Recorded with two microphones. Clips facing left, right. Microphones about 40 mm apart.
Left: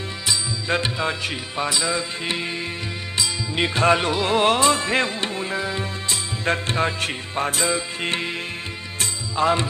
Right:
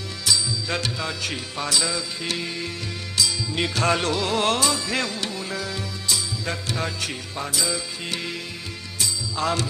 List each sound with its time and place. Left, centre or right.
0.3 s music: left
4.7 s music: left